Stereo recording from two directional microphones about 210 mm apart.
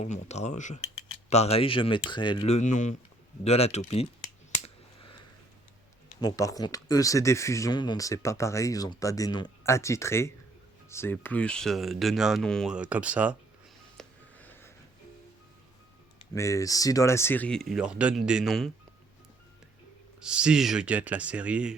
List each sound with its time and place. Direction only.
0.0 s speech: 30° left (ahead or behind)
6.1 s speech: 15° left (ahead or behind); by 13.3 s 5° right (ahead or behind)
13.9 s telephone dialing: 5° left (ahead or behind)
16.3 s speech: 15° left (ahead or behind)
20.1 s speech: 5° right (ahead or behind)